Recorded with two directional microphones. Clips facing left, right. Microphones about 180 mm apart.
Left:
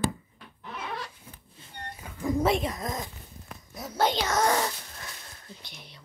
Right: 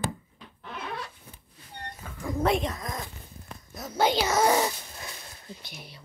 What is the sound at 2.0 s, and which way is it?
Dog, 15° left (ahead or behind).